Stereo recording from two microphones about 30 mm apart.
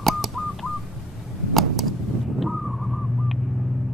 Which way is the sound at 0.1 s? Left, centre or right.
Centre.